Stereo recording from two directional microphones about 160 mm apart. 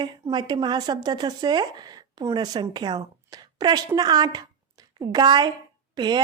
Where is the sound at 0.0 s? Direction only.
30° right (ahead or behind).